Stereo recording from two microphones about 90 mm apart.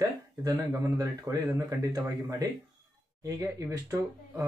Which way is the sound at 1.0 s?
40° right (ahead or behind).